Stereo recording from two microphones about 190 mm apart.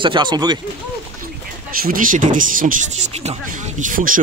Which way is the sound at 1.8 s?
45° right (ahead or behind).